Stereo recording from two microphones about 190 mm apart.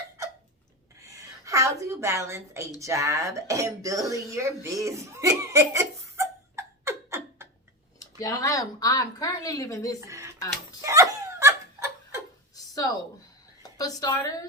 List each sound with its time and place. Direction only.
1.0 s a sound: 15° right (ahead or behind)
2.8 s speech: 15° right (ahead or behind)
8.2 s a woman's voice: 20° left (ahead or behind)
10.0 s speech: 15° right (ahead or behind)
10.8 s laughter: 15° right (ahead or behind)
12.5 s a sound: 20° left (ahead or behind)
13.6 s a woman's voice: 20° left (ahead or behind)